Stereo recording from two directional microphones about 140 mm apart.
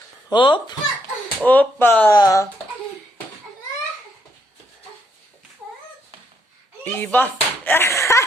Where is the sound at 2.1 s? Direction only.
25° left (ahead or behind).